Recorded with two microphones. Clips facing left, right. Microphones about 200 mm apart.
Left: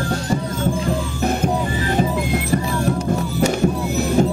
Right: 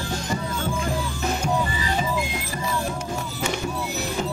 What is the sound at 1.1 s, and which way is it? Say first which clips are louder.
Music: left 5 dB; 55° left (ahead or behind).